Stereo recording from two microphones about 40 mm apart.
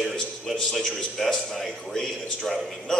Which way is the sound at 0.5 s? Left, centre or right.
Centre.